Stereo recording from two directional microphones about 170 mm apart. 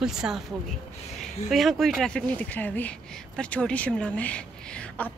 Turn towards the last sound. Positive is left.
turn(degrees=5)  # may be behind; listen again after turning